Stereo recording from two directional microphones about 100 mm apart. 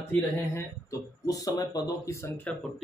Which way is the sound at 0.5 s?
35° left (ahead or behind).